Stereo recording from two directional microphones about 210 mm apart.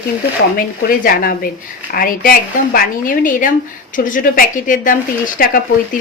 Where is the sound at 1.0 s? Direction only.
40° left (ahead or behind).